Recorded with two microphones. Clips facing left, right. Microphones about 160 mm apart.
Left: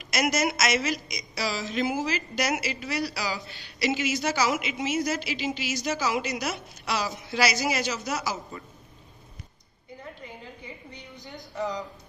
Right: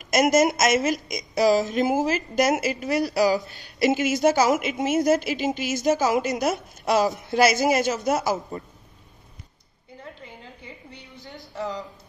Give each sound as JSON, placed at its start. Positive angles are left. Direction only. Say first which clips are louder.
{"t": 0.0, "sound": "a woman's voice", "louder": "right 7 dB", "side_deg": -45}